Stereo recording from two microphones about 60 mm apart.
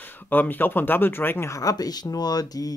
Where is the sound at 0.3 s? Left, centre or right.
Left.